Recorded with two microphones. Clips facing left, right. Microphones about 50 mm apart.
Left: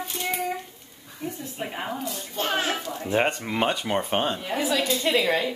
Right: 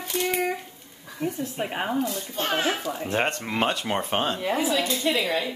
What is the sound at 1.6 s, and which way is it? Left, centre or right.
Speech, right.